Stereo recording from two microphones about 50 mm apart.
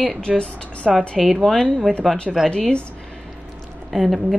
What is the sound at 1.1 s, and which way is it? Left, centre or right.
Speech, centre.